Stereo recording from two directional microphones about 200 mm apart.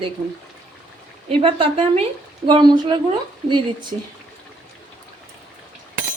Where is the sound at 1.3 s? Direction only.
25° right (ahead or behind).